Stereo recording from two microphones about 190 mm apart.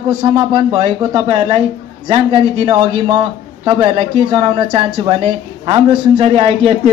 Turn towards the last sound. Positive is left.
turn(degrees=-30)  # may be behind; listen again after turning